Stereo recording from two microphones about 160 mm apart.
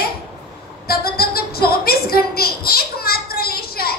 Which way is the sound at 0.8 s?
70° left (ahead or behind).